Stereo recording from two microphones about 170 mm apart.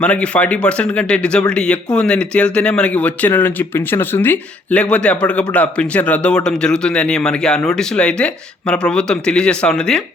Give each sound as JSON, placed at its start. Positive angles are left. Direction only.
{"t": 0.0, "sound": "speech", "side_deg": 5}